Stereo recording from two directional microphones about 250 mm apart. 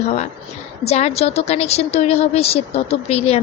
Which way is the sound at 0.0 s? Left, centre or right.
Left.